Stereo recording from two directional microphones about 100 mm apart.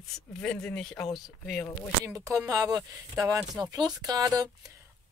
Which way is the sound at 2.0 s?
35° right (ahead or behind).